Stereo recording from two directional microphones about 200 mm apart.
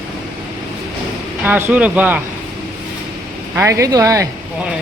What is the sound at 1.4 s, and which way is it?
Speech, 10° right (ahead or behind).